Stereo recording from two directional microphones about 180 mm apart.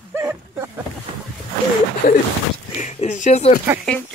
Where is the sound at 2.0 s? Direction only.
45° left (ahead or behind).